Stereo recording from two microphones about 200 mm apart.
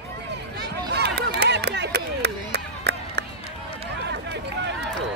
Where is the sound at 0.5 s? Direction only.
55° right (ahead or behind).